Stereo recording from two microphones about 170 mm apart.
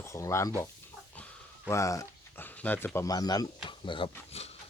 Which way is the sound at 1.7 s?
20° left (ahead or behind).